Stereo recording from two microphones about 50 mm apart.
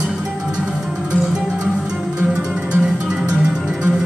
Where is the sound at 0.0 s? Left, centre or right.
Centre.